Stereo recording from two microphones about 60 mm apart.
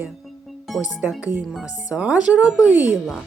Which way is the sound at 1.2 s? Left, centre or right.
Right.